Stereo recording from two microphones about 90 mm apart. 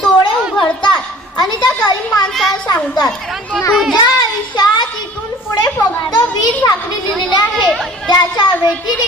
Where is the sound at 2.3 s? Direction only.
5° left (ahead or behind).